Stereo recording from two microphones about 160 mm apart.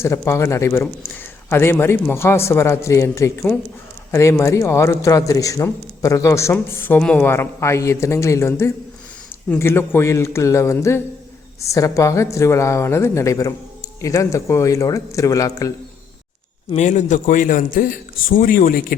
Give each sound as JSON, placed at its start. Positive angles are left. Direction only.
{"t": 0.0, "sound": "a man's voice", "side_deg": 15}
{"t": 16.7, "sound": "a man's voice", "side_deg": 50}